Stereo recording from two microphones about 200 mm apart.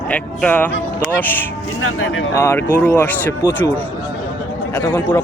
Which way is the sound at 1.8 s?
90° left.